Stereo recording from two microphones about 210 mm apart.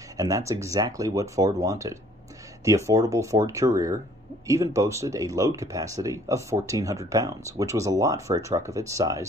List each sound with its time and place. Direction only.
0.2 s speech: 15° right (ahead or behind)